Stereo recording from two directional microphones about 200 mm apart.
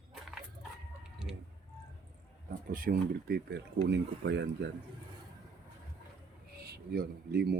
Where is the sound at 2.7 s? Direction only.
45° right (ahead or behind).